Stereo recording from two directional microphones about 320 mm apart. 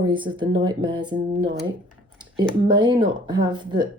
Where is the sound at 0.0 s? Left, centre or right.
Centre.